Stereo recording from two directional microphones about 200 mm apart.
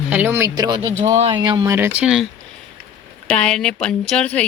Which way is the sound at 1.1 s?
35° right (ahead or behind).